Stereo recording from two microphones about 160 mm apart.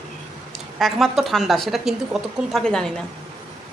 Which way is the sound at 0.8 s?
Centre (ahead or behind).